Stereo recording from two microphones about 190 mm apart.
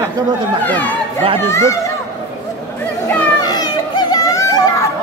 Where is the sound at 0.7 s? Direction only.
10° left (ahead or behind).